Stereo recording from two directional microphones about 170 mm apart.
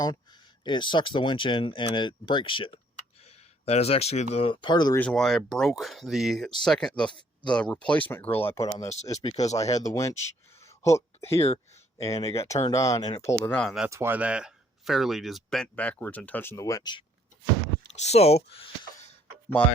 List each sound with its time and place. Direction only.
0.6 s speech: 25° left (ahead or behind)
4.9 s speech: 5° left (ahead or behind)
9.4 s speech: 40° left (ahead or behind)
9.7 s speech: 20° left (ahead or behind)
13.4 s speech: 5° left (ahead or behind)
13.9 s speech: 10° right (ahead or behind); by 17.0 s 25° left (ahead or behind)
17.9 s speech: 40° left (ahead or behind)